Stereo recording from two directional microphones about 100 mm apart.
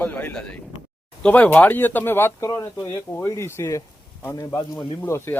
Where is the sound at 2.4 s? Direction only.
30° left (ahead or behind).